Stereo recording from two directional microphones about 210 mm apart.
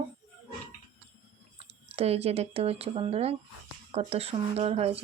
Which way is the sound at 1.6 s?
30° right (ahead or behind).